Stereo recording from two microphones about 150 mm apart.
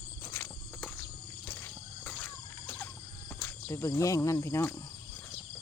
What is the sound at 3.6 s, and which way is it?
Speech, 20° left (ahead or behind).